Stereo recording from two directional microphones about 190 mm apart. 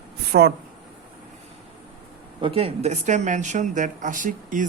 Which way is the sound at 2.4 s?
30° right (ahead or behind).